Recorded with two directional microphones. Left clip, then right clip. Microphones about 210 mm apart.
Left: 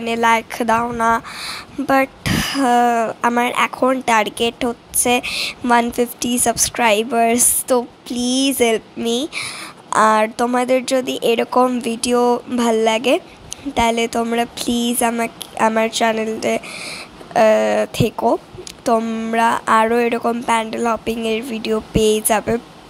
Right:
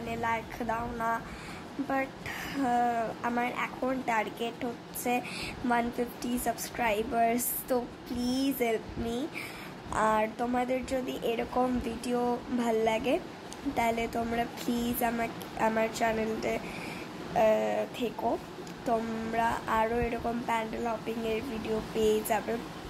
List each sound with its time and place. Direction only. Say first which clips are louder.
0.1 s a woman's voice: left 17 dB; 40° left (ahead or behind)